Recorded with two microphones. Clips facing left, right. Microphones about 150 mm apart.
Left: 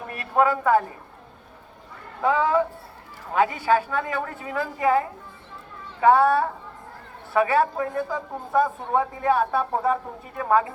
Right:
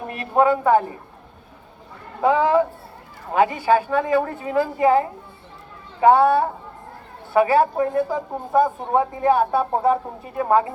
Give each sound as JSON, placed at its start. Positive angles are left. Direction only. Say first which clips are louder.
{"t": 0.1, "sound": "a woman's voice", "louder": "right 3 dB", "side_deg": -25}
{"t": 2.2, "sound": "a woman's voice", "louder": "right 4 dB", "side_deg": -30}